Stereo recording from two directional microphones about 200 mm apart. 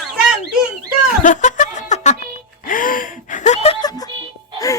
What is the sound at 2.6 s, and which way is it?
Gasp, 40° left (ahead or behind).